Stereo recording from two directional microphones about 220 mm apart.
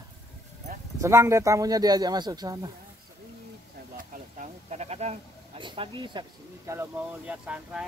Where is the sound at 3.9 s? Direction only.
30° right (ahead or behind).